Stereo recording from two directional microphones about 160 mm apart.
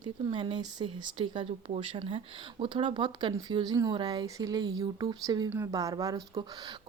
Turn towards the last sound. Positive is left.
turn(degrees=-25)  # may be behind; listen again after turning